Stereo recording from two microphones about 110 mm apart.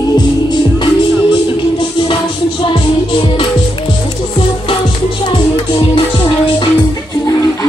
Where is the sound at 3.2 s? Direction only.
50° left (ahead or behind).